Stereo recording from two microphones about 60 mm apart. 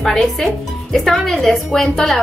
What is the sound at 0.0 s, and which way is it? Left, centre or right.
Speech, centre.